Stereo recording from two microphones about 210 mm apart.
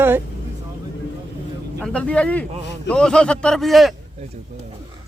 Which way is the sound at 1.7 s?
5° left (ahead or behind).